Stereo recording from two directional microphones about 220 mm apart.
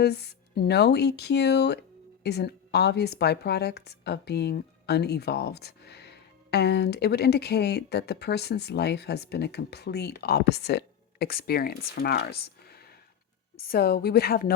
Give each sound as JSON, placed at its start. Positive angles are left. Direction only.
{"t": 0.0, "sound": "speech", "side_deg": 45}